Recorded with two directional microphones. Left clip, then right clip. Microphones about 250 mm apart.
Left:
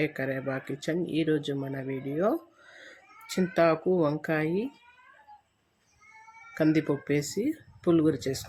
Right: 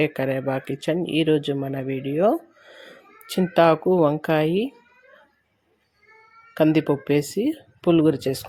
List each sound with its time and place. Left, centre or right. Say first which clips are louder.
0.0 s speech: right 7 dB; centre
6.5 s speech: right 7 dB; centre